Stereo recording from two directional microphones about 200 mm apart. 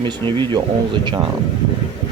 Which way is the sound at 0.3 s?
20° right (ahead or behind).